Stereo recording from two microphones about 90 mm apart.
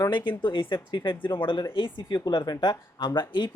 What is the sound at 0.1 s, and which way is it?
Speech, 60° left (ahead or behind).